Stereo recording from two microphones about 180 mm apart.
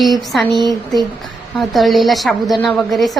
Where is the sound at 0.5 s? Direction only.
25° right (ahead or behind).